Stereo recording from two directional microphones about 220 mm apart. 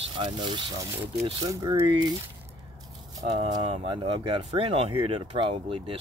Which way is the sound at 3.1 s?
20° right (ahead or behind).